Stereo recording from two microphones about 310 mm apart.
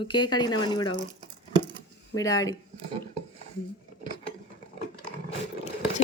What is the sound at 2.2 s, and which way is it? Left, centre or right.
Speech, centre.